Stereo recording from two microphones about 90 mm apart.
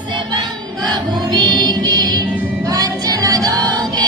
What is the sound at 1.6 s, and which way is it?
Music, 50° right (ahead or behind).